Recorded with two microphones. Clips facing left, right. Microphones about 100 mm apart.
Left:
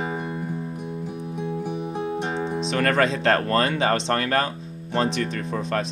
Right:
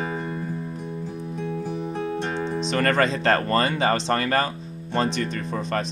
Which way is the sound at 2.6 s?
Centre (ahead or behind).